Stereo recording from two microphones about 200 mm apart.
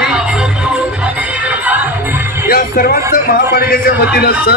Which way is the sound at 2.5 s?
50° left (ahead or behind).